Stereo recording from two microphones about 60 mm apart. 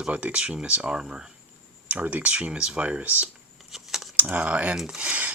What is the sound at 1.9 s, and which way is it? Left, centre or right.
Speech, right.